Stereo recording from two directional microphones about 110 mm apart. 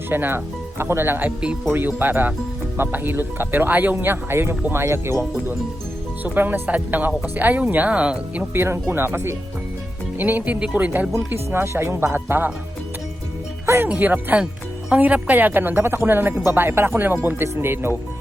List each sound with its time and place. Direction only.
0.1 s speech: 20° right (ahead or behind)
6.2 s speech: 15° right (ahead or behind)
8.5 s speech: 20° right (ahead or behind)
13.7 s speech: 15° right (ahead or behind)